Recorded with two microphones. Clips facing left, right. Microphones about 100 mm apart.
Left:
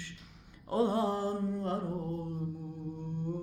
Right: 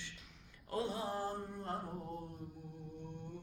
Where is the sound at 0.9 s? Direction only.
65° left (ahead or behind); by 1.8 s 90° left.